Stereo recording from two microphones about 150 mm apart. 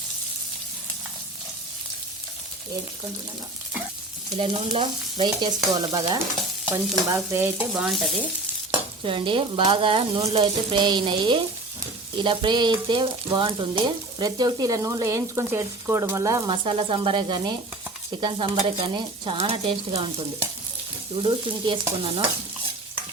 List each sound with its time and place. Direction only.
4.4 s stir: 40° right (ahead or behind)
5.7 s frying: 30° right (ahead or behind)
6.7 s stir: 15° right (ahead or behind)
7.7 s frying: centre (ahead or behind)
9.0 s stir: 35° right (ahead or behind)
10.4 s stir: 30° right (ahead or behind)
12.2 s frying: 35° right (ahead or behind)
16.6 s stir: 35° right (ahead or behind)